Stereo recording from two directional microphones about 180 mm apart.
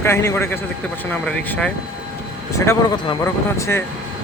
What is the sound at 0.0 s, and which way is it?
Speech, 15° left (ahead or behind).